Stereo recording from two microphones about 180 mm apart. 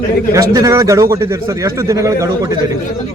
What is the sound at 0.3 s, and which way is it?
A man's voice, 20° right (ahead or behind).